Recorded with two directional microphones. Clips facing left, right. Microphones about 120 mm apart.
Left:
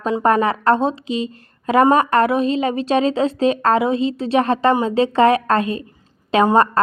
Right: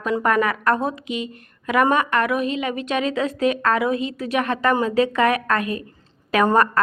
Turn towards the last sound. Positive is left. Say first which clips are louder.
# left 3 dB
turn(degrees=25)  # may be behind; listen again after turning